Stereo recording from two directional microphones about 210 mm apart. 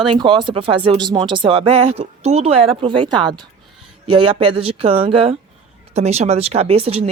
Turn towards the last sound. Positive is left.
turn(degrees=-30)  # may be behind; listen again after turning